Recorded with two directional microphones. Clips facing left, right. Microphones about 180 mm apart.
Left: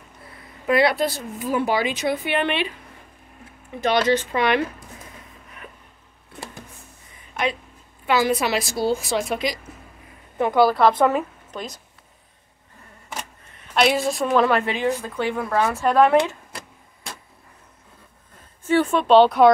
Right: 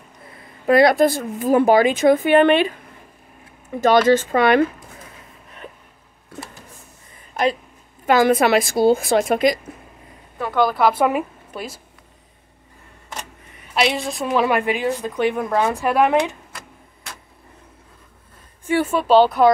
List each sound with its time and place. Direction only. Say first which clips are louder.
0.7 s a woman's voice: right 6 dB; 40° right (ahead or behind)
3.8 s a woman's voice: right 5 dB; 45° right (ahead or behind)
8.1 s a woman's voice: right 6 dB; 50° right (ahead or behind)
10.4 s speech: left 2 dB; 10° left (ahead or behind)
10.8 s a woman's voice: even; 10° right (ahead or behind)
13.7 s a woman's voice: left 2 dB; centre (ahead or behind); by 16.3 s 20° right (ahead or behind)
18.7 s a woman's voice: even; 10° right (ahead or behind)